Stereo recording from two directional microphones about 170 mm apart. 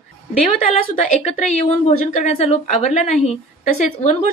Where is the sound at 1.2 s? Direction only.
40° left (ahead or behind).